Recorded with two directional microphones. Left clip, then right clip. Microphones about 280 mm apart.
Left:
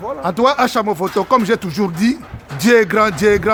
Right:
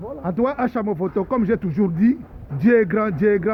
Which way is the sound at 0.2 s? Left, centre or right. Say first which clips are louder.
Left 8 dB; centre.